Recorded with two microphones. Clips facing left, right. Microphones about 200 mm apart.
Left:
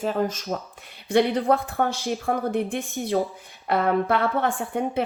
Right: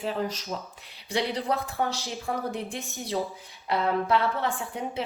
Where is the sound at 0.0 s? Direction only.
45° left (ahead or behind).